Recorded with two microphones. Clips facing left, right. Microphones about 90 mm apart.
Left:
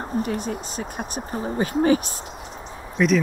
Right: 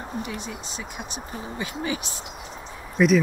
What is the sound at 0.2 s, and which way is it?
Speech, 45° left (ahead or behind).